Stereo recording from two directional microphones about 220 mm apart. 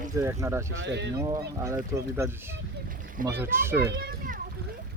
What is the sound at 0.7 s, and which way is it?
Speech, 55° right (ahead or behind).